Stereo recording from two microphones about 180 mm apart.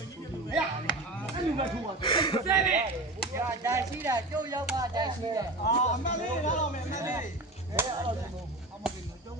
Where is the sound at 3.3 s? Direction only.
15° right (ahead or behind).